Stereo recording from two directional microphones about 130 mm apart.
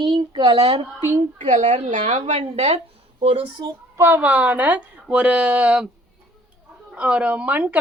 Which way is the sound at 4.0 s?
15° right (ahead or behind).